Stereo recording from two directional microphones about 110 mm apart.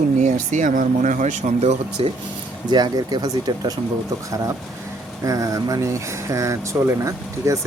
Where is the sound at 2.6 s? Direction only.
40° right (ahead or behind).